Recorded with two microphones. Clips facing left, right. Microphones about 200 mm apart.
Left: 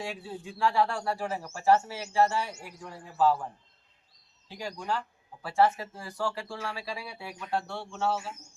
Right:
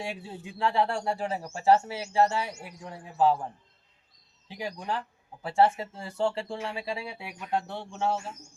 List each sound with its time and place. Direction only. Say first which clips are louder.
0.0 s speech: even; 20° right (ahead or behind)
4.4 s speech: right 1 dB; 20° right (ahead or behind)